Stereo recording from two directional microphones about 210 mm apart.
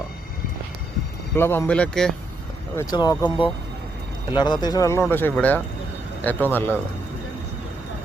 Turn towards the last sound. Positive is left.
turn(degrees=10)  # may be behind; listen again after turning